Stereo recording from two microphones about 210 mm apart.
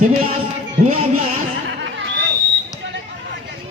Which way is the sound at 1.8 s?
60° right (ahead or behind).